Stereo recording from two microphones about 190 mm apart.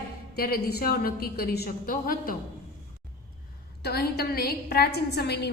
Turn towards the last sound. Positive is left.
turn(degrees=60)  # may be behind; listen again after turning